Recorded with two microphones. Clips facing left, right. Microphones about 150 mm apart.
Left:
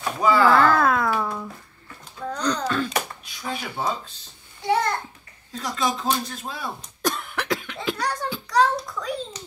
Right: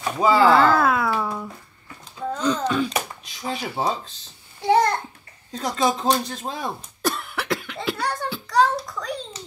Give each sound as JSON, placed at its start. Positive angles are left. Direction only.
{"t": 0.2, "sound": "speech", "side_deg": -25}
{"t": 0.6, "sound": "cat", "side_deg": -5}
{"t": 2.3, "sound": "a sound", "side_deg": -5}
{"t": 3.6, "sound": "speech", "side_deg": -35}
{"t": 4.6, "sound": "babbling", "side_deg": -40}
{"t": 5.5, "sound": "speech", "side_deg": -35}
{"t": 7.0, "sound": "cough", "side_deg": -5}